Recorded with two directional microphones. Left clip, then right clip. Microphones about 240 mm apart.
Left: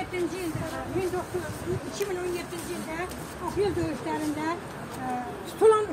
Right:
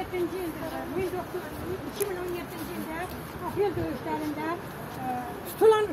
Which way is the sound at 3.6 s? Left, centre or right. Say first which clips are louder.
Even; left.